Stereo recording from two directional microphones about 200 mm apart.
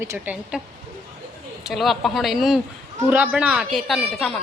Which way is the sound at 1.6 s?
Centre (ahead or behind).